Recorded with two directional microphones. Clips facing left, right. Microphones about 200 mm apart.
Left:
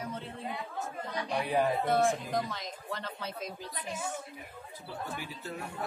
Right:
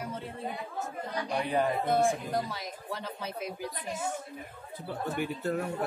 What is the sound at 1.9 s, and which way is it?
Speech, 10° right (ahead or behind).